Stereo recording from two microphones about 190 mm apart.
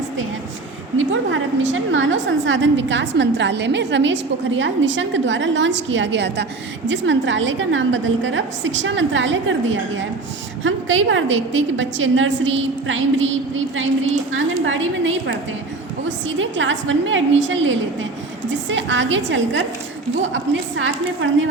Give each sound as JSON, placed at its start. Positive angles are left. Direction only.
{"t": 0.9, "sound": "a woman's voice", "side_deg": -85}
{"t": 10.6, "sound": "a woman's voice", "side_deg": -90}
{"t": 18.5, "sound": "a woman's voice", "side_deg": -75}